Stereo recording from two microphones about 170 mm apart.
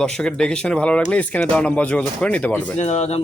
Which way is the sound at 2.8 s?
40° left (ahead or behind).